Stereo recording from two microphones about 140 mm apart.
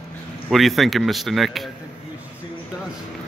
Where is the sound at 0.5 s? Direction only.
Centre (ahead or behind).